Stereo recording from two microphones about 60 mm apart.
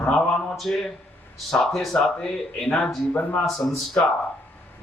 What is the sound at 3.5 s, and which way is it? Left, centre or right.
Speech, centre.